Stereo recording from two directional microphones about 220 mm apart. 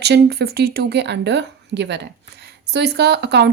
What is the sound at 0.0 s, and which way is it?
Speech, 50° right (ahead or behind).